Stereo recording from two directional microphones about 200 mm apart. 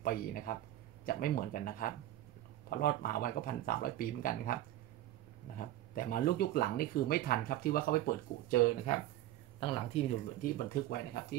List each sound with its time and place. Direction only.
0.0 s speech: 45° left (ahead or behind)
5.6 s speech: 45° left (ahead or behind)
9.6 s speech: 25° left (ahead or behind)
10.4 s speech: 50° left (ahead or behind)